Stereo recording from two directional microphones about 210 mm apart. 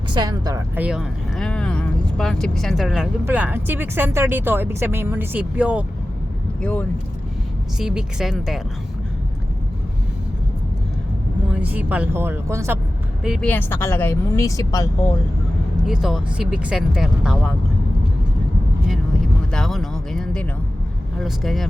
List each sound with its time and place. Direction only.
0.1 s speech: 20° right (ahead or behind)
0.9 s speech: centre (ahead or behind)
6.6 s speech: 5° left (ahead or behind)
11.5 s speech: 5° right (ahead or behind)
13.2 s speech: centre (ahead or behind)
13.5 s speech: 10° left (ahead or behind)
15.9 s speech: centre (ahead or behind)
19.5 s a sound: centre (ahead or behind)
21.2 s speech: centre (ahead or behind)